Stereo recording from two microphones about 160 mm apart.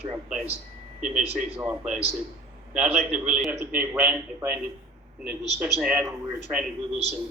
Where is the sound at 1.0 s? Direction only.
50° right (ahead or behind).